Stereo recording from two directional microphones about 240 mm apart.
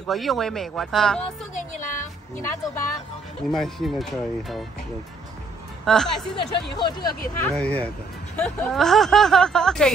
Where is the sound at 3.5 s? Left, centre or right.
Centre.